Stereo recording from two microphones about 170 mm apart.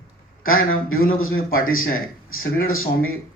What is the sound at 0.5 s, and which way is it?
Speech, 60° left (ahead or behind).